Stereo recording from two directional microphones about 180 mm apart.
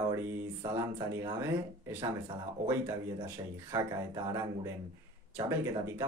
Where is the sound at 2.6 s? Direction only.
15° right (ahead or behind).